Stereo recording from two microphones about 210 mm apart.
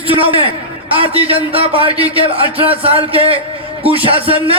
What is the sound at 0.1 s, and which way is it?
Speech, 25° right (ahead or behind).